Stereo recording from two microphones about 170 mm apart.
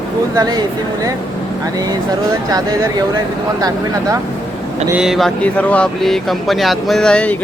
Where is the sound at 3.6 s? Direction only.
20° right (ahead or behind).